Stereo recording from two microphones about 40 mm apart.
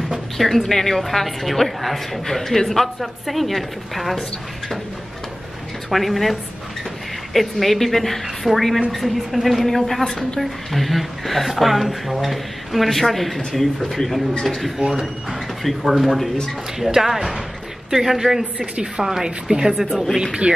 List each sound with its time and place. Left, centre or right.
0.4 s a woman's voice: centre
5.9 s a woman's voice: centre
7.3 s a woman's voice: centre
14.8 s a woman's voice: centre
19.9 s a woman's voice: centre
20.5 s speech: right